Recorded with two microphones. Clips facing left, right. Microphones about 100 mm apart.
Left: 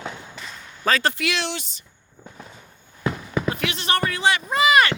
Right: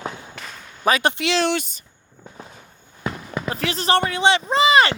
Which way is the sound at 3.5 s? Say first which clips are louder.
Right 5 dB; 35° right (ahead or behind).